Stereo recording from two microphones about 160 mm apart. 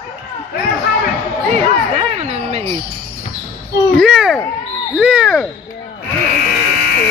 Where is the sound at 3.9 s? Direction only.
Centre (ahead or behind).